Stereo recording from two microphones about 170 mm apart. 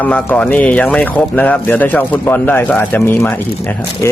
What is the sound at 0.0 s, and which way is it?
Speech, 10° left (ahead or behind).